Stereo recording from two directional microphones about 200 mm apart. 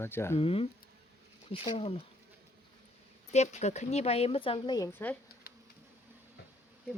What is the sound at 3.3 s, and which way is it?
A woman's voice, 35° left (ahead or behind).